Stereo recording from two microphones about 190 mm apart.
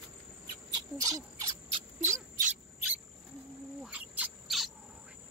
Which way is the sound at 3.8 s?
5° right (ahead or behind).